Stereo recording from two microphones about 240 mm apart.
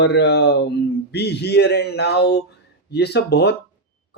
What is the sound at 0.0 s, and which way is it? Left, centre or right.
Speech, left.